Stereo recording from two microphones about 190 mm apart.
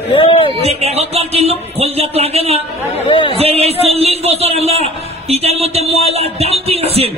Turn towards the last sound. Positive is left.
turn(degrees=-30)  # may be behind; listen again after turning